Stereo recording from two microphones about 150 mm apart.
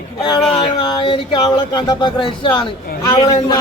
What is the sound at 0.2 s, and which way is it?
Speech, 30° left (ahead or behind).